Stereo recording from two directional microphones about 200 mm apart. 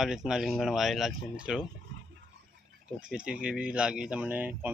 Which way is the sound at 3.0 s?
5° right (ahead or behind).